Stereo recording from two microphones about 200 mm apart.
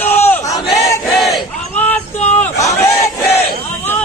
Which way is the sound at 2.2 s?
10° left (ahead or behind).